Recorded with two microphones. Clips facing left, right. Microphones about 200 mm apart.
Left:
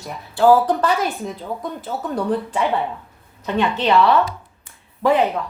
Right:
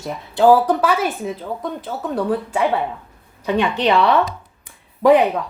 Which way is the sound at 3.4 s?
15° right (ahead or behind).